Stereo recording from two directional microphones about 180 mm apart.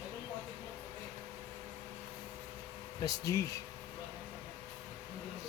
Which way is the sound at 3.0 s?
20° left (ahead or behind).